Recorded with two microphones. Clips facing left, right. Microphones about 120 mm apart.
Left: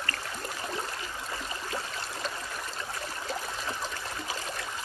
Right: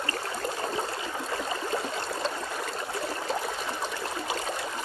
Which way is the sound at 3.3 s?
25° right (ahead or behind).